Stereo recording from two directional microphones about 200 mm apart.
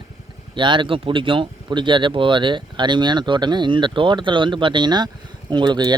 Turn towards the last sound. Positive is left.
turn(degrees=-20)  # may be behind; listen again after turning